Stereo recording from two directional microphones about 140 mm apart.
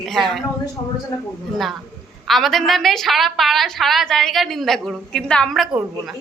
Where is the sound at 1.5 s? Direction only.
Centre (ahead or behind).